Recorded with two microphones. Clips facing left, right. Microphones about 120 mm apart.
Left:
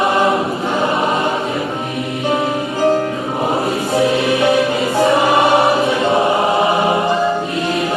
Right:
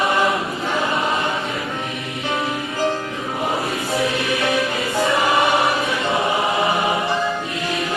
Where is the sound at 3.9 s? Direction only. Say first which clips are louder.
Left 7 dB; 25° left (ahead or behind).